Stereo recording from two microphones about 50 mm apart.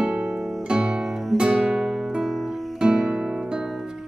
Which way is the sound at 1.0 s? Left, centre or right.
Centre.